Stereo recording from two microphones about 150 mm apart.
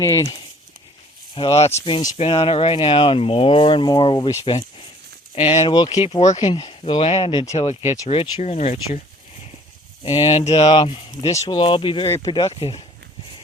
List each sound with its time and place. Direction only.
1.4 s speech: 35° left (ahead or behind)
6.2 s speech: 45° left (ahead or behind)
6.5 s speech: 35° left (ahead or behind)
7.5 s speech: 45° left (ahead or behind)
10.0 s speech: 30° left (ahead or behind)
10.3 s speech: 45° left (ahead or behind)
10.7 s speech: 30° left (ahead or behind)
12.0 s speech: 20° left (ahead or behind)
12.3 s speech: 30° left (ahead or behind)